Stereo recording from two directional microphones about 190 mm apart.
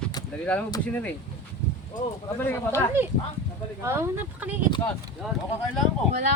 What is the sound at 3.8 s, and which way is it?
Speech, 15° right (ahead or behind).